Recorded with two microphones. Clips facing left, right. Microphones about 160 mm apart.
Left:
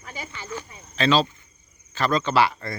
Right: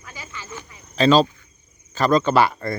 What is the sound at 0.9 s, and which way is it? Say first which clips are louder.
Speech: right 5 dB; 40° right (ahead or behind).